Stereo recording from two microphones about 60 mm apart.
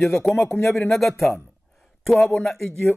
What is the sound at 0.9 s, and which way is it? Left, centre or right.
Speech, centre.